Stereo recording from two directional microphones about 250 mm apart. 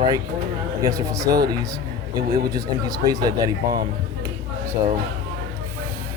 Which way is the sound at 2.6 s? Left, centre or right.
Centre.